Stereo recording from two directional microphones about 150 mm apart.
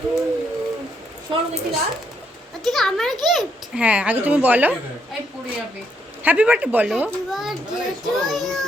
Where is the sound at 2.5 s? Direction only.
Centre (ahead or behind).